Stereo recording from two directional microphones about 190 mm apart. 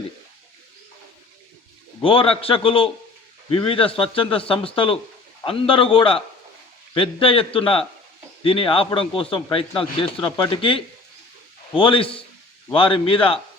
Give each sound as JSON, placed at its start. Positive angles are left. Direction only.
{"t": 2.0, "sound": "a man's voice", "side_deg": 30}